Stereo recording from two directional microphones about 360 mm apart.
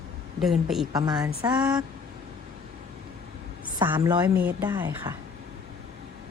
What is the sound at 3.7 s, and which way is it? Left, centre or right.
A woman's voice, centre.